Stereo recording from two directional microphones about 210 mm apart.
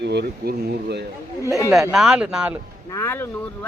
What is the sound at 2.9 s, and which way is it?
Speech, 10° left (ahead or behind).